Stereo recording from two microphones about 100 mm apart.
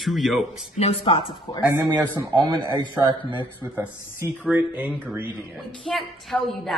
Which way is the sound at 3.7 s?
15° right (ahead or behind).